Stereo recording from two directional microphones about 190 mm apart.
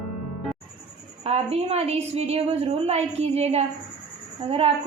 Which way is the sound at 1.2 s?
35° right (ahead or behind).